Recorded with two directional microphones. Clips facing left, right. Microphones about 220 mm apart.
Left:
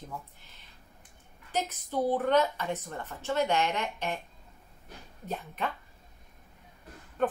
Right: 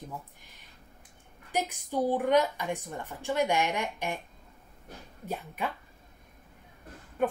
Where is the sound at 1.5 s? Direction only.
15° right (ahead or behind).